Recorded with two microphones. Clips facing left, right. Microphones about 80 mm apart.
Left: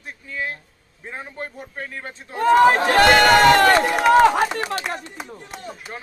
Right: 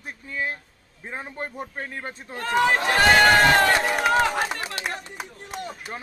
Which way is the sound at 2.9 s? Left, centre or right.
Left.